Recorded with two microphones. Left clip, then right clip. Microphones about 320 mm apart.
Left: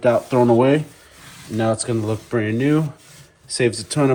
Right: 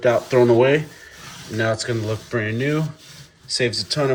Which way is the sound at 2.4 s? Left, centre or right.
Centre.